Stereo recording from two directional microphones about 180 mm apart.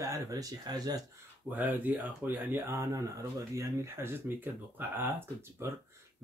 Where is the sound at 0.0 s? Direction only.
20° right (ahead or behind).